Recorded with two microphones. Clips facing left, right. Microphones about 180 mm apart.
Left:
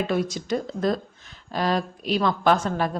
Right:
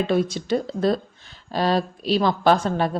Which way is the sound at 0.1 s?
30° right (ahead or behind).